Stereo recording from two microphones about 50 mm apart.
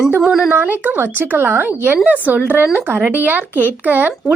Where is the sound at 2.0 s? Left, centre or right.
Right.